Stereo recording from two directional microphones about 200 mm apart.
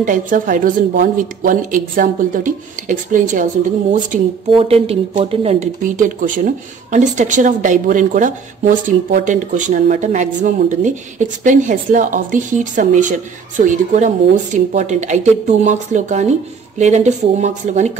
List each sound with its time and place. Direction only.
0.0 s speech: 40° right (ahead or behind)
4.6 s speech: 30° right (ahead or behind)